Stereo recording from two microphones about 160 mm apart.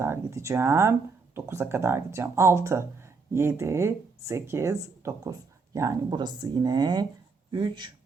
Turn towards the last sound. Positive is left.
turn(degrees=-30)  # may be behind; listen again after turning